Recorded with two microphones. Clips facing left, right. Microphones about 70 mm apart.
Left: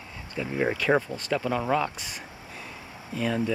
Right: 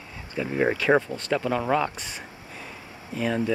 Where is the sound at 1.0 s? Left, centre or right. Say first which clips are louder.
Right 2 dB; centre.